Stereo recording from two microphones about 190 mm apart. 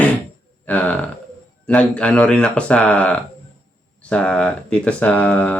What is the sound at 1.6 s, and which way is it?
Speech, 5° left (ahead or behind).